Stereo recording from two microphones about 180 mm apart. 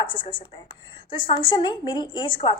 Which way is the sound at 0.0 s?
25° left (ahead or behind).